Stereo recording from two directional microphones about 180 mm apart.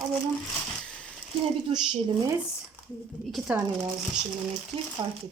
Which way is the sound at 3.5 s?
5° right (ahead or behind).